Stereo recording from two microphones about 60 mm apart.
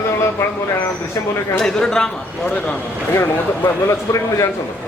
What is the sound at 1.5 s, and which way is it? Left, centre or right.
Speech, centre.